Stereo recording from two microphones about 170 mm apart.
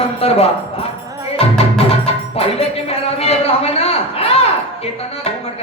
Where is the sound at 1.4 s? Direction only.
35° left (ahead or behind).